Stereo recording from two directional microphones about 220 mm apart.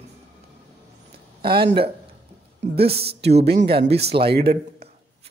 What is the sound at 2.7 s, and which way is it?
Speech, 45° right (ahead or behind).